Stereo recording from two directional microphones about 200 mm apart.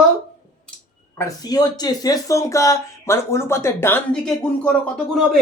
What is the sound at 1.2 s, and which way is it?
Speech, 20° left (ahead or behind).